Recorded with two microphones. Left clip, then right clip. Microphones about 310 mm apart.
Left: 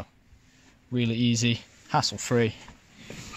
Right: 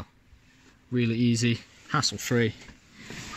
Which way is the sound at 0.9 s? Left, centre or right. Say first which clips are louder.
Even; centre.